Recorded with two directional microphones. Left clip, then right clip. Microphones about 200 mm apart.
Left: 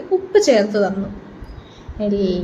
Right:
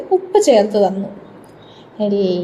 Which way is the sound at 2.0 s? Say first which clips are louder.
Right 3 dB; 15° right (ahead or behind).